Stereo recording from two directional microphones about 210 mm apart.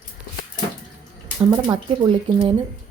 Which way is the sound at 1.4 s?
20° right (ahead or behind).